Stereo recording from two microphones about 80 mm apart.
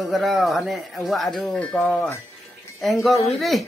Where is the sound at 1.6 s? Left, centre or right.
Centre.